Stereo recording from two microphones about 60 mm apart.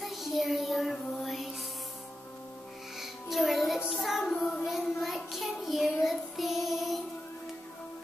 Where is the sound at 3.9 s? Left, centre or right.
Centre.